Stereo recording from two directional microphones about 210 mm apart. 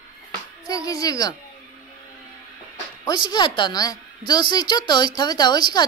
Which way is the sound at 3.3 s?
20° left (ahead or behind).